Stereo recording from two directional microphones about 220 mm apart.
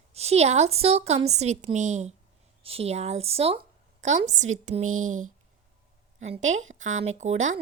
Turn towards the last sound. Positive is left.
turn(degrees=-30)  # may be behind; listen again after turning